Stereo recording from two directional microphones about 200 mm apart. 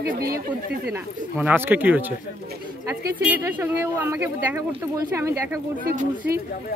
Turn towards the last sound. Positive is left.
turn(degrees=-40)  # may be behind; listen again after turning